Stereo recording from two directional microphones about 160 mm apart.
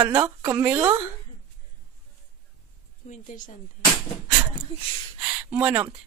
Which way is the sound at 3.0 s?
50° left (ahead or behind).